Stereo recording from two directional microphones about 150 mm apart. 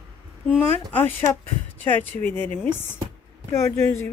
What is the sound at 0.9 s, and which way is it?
Speech, 15° left (ahead or behind).